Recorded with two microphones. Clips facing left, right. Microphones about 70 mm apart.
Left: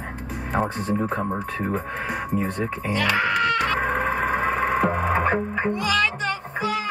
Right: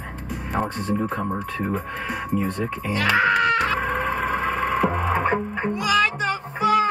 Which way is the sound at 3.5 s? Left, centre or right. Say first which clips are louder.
Right 1 dB; centre.